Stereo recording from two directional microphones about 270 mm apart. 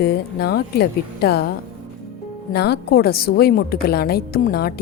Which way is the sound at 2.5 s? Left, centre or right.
Left.